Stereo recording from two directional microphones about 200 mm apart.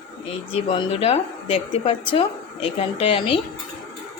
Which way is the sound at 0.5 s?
25° left (ahead or behind).